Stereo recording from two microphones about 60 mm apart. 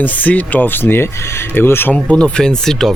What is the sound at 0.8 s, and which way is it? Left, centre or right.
Speech, left.